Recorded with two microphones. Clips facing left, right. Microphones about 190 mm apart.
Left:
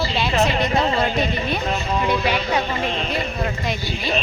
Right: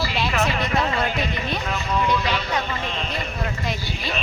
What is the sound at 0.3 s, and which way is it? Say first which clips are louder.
Speech: left 5 dB; 30° left (ahead or behind).